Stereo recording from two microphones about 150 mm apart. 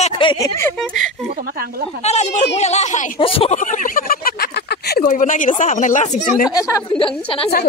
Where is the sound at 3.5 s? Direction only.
55° left (ahead or behind); by 5.1 s 90° left.